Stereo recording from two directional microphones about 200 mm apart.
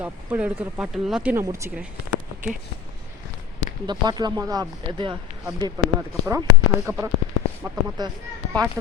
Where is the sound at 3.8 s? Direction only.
20° right (ahead or behind).